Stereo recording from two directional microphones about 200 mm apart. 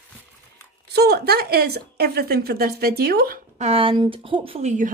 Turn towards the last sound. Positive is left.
turn(degrees=-35)  # may be behind; listen again after turning